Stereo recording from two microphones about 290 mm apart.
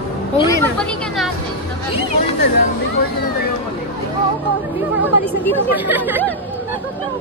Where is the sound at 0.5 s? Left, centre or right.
Centre.